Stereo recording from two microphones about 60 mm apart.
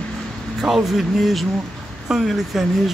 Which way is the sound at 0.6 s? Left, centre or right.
Centre.